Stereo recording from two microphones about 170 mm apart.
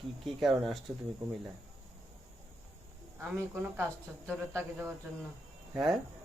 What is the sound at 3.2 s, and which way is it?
Speech, 15° right (ahead or behind).